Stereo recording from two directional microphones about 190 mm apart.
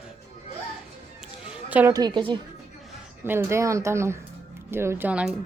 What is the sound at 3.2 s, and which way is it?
A woman's voice, 15° right (ahead or behind).